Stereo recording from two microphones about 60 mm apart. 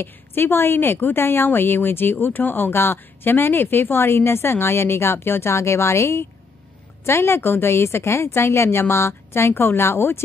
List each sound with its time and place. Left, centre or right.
0.0 s a woman's voice: left